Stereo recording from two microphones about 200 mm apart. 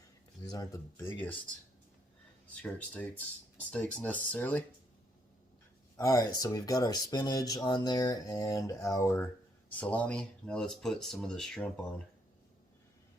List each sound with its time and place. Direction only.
0.4 s speech: 20° left (ahead or behind)
2.6 s speech: 5° left (ahead or behind)
6.0 s speech: 15° left (ahead or behind)